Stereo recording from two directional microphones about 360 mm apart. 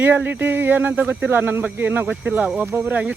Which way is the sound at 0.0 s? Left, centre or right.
Centre.